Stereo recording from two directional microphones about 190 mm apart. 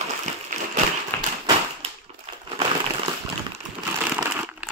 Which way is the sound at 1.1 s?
10° left (ahead or behind).